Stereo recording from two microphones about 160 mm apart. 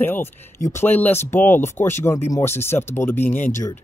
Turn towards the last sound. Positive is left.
turn(degrees=15)  # may be behind; listen again after turning